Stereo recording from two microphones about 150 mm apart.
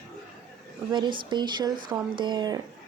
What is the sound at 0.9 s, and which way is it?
Speech, 30° right (ahead or behind).